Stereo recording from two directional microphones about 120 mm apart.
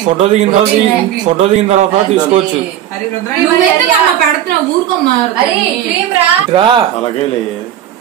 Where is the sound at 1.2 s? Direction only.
80° right.